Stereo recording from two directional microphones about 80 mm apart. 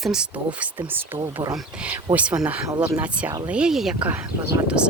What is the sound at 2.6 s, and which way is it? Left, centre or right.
Speech, right.